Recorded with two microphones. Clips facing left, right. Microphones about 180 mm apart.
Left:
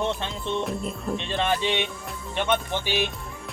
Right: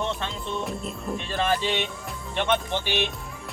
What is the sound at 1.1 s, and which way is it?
Speech, 20° left (ahead or behind).